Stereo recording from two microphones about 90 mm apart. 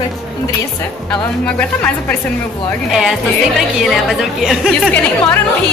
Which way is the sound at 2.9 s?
5° right (ahead or behind).